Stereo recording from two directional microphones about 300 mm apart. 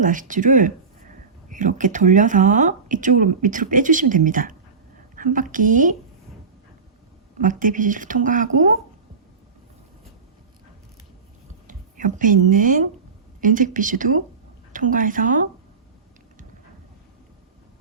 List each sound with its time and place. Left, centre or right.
0.0 s a woman's voice: right
7.3 s speech: right
11.7 s speech: right